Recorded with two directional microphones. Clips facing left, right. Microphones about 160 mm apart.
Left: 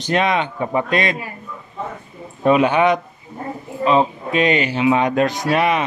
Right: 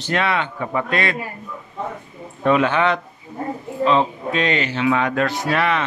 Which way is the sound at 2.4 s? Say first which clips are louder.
Left 3 dB; 15° left (ahead or behind).